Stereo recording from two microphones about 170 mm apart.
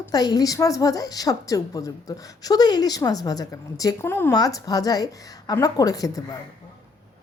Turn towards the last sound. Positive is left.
turn(degrees=20)  # may be behind; listen again after turning